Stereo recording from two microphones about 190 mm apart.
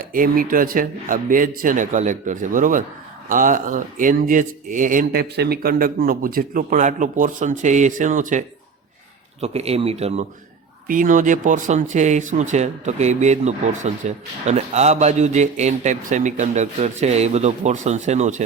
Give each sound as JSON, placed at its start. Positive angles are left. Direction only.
{"t": 0.0, "sound": "speech", "side_deg": -50}
{"t": 10.8, "sound": "speech", "side_deg": -45}